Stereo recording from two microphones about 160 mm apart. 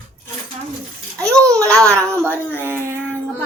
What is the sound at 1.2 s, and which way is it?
Speech, 5° left (ahead or behind).